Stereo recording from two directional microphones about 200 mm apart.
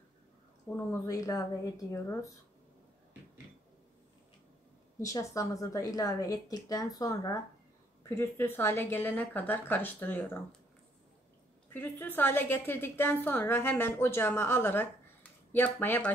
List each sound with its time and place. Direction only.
0.7 s a woman's voice: 15° left (ahead or behind)
5.0 s a woman's voice: 15° left (ahead or behind)
11.7 s a woman's voice: 10° left (ahead or behind)